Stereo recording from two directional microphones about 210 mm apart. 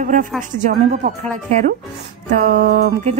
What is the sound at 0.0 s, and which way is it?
Speech, 35° right (ahead or behind).